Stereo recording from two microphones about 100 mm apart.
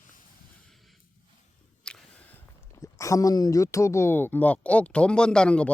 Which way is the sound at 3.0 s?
35° left (ahead or behind).